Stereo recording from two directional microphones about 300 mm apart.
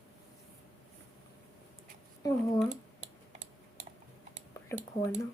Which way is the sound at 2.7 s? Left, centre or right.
Right.